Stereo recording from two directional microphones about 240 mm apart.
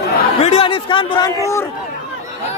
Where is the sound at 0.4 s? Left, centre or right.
Left.